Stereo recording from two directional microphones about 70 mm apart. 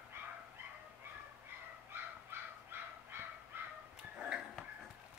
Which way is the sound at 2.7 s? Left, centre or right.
Right.